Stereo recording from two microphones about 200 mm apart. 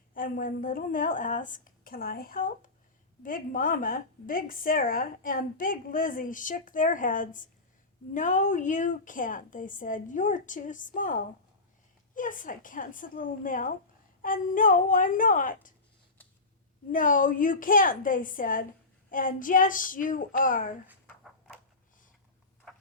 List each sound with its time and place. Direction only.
0.1 s a woman's voice: 45° left (ahead or behind)
16.9 s a woman's voice: 40° left (ahead or behind)